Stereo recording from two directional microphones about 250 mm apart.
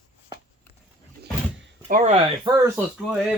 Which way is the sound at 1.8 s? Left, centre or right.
Right.